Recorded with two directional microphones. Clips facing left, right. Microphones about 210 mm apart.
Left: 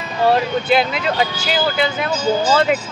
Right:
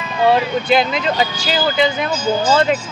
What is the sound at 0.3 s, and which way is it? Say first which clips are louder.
Speech: right 1 dB; 5° left (ahead or behind).